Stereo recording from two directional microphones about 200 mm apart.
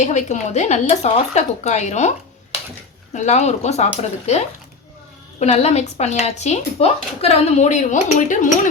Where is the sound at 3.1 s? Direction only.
35° left (ahead or behind).